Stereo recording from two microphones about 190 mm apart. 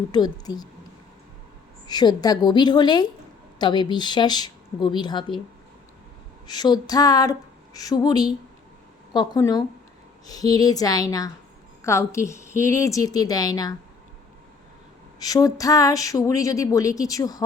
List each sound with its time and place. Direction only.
0.1 s speech: 20° left (ahead or behind)
1.9 s speech: 20° left (ahead or behind)
6.5 s speech: 20° left (ahead or behind)
15.2 s speech: 20° left (ahead or behind)